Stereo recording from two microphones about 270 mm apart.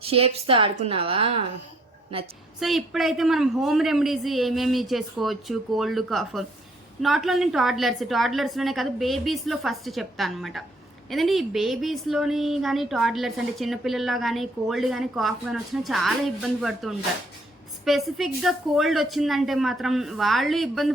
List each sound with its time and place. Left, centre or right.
0.0 s a woman's voice: right
2.6 s a woman's voice: centre